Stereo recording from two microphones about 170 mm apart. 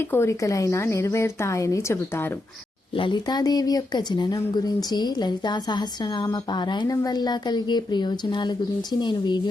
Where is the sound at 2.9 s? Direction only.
30° left (ahead or behind).